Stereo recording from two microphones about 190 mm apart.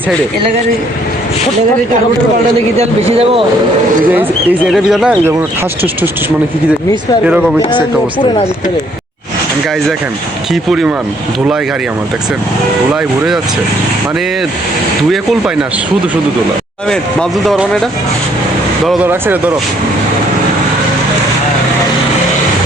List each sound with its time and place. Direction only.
2.7 s a man's voice: 30° right (ahead or behind)
4.1 s speech: 5° right (ahead or behind)
7.3 s speech: 5° right (ahead or behind)
10.5 s speech: centre (ahead or behind)
13.0 s speech: centre (ahead or behind)
15.1 s speech: centre (ahead or behind)
16.9 s speech: 5° left (ahead or behind)
18.9 s speech: 10° right (ahead or behind)